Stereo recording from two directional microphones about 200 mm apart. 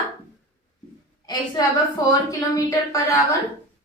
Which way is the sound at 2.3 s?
15° left (ahead or behind).